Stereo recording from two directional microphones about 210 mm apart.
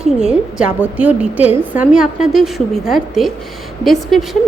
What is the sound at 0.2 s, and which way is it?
A woman's voice, 5° right (ahead or behind).